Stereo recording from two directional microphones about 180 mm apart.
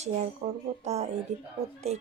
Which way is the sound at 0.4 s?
30° right (ahead or behind).